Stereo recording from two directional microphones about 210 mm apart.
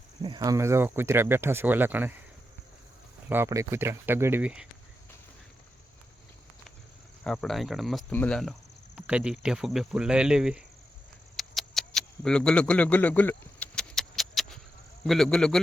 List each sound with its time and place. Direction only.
0.2 s speech: 20° right (ahead or behind)
3.2 s speech: 10° right (ahead or behind)
7.3 s speech: centre (ahead or behind)
11.3 s a sound: centre (ahead or behind)
15.0 s speech: centre (ahead or behind)